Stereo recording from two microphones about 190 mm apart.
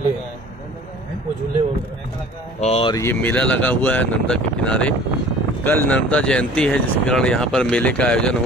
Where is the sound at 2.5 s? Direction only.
35° left (ahead or behind).